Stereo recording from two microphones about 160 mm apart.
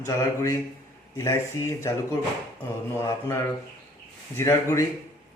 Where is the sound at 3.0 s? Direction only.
15° left (ahead or behind).